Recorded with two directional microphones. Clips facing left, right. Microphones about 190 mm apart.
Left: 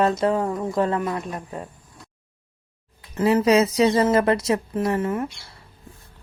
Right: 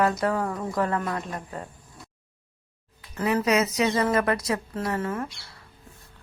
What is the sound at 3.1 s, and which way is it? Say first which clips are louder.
Speech: left 6 dB; 25° left (ahead or behind).